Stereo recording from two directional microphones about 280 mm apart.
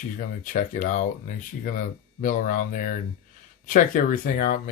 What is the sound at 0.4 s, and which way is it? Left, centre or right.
Speech, left.